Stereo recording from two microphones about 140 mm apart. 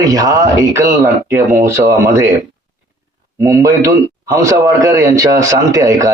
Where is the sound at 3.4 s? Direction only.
20° right (ahead or behind).